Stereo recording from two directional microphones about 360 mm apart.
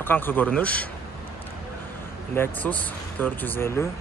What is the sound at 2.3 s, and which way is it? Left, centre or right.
Speech, centre.